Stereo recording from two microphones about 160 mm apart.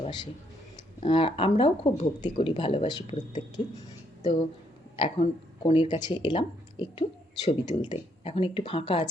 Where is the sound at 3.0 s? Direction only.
50° left (ahead or behind).